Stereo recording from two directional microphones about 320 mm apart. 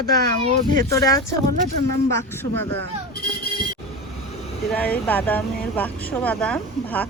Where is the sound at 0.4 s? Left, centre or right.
Right.